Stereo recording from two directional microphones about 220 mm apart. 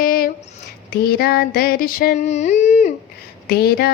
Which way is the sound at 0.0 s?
40° left (ahead or behind).